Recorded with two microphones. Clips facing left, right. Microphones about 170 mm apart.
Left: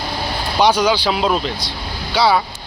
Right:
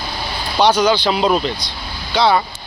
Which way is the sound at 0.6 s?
10° left (ahead or behind).